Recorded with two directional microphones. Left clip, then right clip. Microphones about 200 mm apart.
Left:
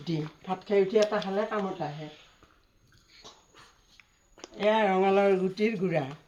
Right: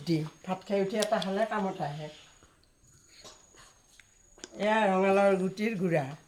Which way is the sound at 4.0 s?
15° right (ahead or behind).